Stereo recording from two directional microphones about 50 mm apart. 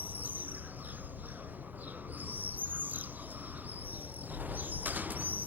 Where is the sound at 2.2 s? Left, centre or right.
Right.